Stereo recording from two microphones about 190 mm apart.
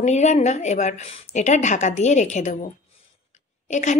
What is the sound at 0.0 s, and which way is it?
A woman's voice, 35° left (ahead or behind).